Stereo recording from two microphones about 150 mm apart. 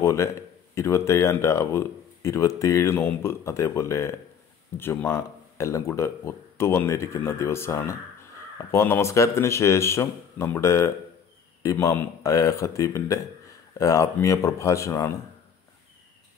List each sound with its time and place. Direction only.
0.0 s speech: 20° left (ahead or behind)